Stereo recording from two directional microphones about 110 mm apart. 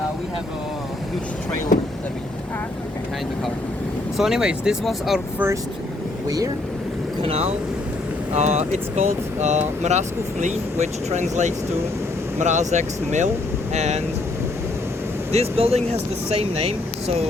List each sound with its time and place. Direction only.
4.2 s speech: 5° right (ahead or behind)
6.2 s speech: 35° right (ahead or behind)
7.2 s speech: 65° right (ahead or behind); by 14.0 s 85° right
15.3 s speech: 65° right (ahead or behind)